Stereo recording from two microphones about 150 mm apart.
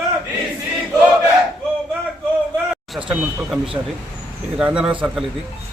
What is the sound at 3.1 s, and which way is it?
Speech, 5° right (ahead or behind).